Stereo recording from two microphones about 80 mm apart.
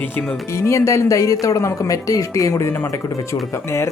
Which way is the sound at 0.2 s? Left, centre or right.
Left.